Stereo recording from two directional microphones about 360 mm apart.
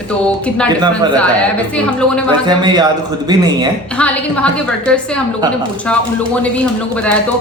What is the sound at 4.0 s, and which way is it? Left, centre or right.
A woman's voice, centre.